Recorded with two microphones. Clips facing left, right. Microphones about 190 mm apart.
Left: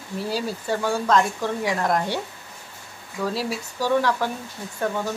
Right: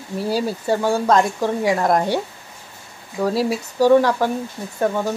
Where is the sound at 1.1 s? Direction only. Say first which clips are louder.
Right 2 dB; 40° right (ahead or behind).